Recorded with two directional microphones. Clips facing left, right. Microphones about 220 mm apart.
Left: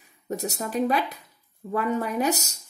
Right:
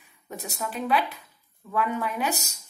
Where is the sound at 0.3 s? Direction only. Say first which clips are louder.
Left 5 dB; 40° left (ahead or behind).